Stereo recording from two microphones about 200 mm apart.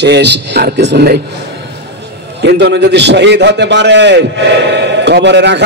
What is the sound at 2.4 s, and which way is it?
A man's voice, 60° right (ahead or behind).